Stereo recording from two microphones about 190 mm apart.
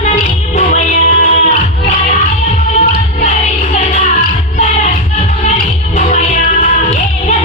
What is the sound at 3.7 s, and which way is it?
Music, 35° left (ahead or behind).